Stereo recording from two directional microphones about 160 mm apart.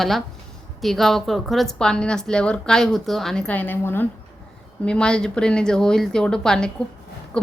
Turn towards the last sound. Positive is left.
turn(degrees=5)  # may be behind; listen again after turning